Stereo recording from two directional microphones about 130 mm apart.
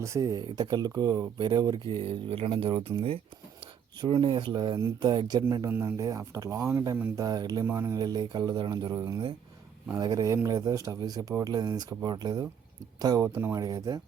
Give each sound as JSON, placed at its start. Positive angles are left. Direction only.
{"t": 0.0, "sound": "speech", "side_deg": -25}
{"t": 1.9, "sound": "speech", "side_deg": -45}
{"t": 7.9, "sound": "speech", "side_deg": -30}